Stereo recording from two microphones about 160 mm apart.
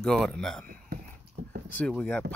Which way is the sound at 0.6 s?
65° right (ahead or behind).